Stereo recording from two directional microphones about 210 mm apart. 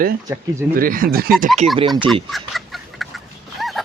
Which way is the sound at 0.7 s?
40° right (ahead or behind).